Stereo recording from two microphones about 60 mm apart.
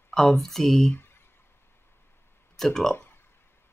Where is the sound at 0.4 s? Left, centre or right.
Centre.